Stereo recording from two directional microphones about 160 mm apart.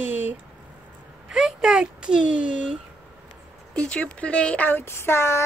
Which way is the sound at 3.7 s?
5° left (ahead or behind).